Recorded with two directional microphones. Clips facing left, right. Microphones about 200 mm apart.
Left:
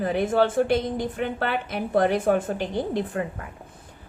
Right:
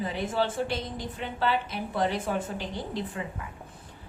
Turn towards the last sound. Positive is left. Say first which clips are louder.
# left 8 dB
turn(degrees=55)  # may be behind; listen again after turning